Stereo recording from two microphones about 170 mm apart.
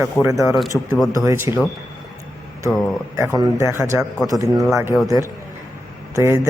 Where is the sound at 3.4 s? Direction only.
15° right (ahead or behind).